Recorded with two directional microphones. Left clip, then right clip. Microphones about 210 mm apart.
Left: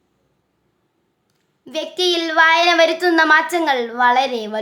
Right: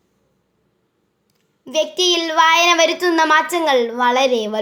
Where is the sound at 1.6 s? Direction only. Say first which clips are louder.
Right 3 dB; 5° right (ahead or behind).